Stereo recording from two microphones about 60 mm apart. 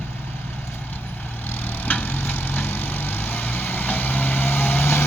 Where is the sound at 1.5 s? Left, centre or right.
Left.